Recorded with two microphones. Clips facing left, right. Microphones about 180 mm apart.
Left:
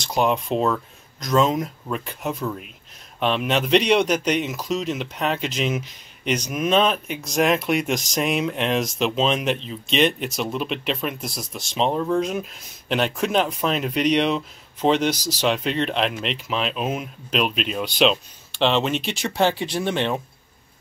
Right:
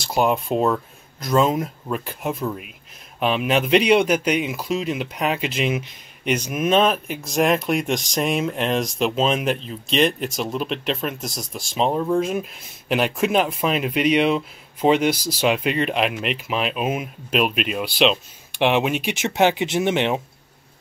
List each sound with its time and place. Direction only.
0.0 s speech: 5° right (ahead or behind)
18.5 s speech: 15° right (ahead or behind)